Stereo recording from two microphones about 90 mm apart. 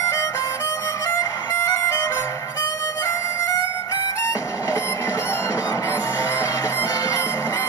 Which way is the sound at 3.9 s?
35° left (ahead or behind).